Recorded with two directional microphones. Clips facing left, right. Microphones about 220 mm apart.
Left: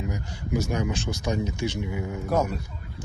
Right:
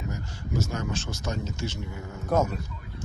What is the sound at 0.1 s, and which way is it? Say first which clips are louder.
Speech: left 4 dB; 15° left (ahead or behind).